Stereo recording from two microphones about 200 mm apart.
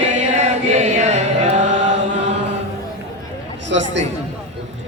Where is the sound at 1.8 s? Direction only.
65° right (ahead or behind).